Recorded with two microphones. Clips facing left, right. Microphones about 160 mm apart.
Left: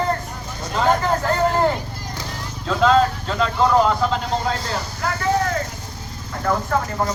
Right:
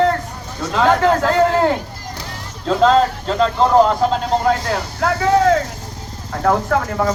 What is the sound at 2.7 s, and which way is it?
Speech, 35° right (ahead or behind).